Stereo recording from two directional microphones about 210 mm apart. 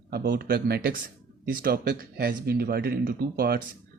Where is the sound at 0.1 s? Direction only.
50° right (ahead or behind).